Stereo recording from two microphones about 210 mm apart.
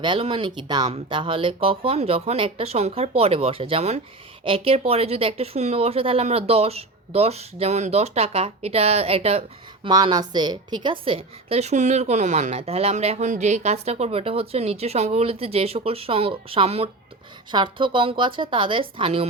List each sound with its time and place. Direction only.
0.0 s a woman's voice: 25° right (ahead or behind)